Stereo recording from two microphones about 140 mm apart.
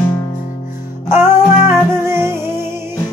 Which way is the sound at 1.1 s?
15° right (ahead or behind).